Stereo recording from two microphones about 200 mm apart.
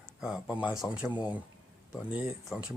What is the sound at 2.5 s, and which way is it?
Speech, 5° right (ahead or behind).